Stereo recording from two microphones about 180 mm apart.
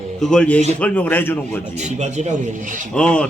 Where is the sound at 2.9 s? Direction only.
5° left (ahead or behind).